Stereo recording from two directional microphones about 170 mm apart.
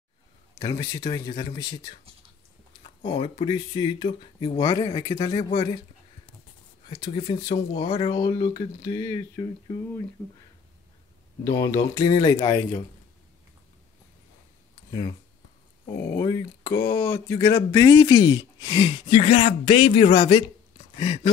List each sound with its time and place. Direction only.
0.6 s speech: 25° left (ahead or behind)
3.0 s speech: 35° left (ahead or behind)
7.1 s speech: 30° left (ahead or behind)
8.2 s speech: 20° left (ahead or behind)
11.4 s speech: 20° left (ahead or behind)
14.9 s speech: 25° left (ahead or behind)
15.9 s speech: 65° left (ahead or behind)
16.2 s speech: 20° left (ahead or behind)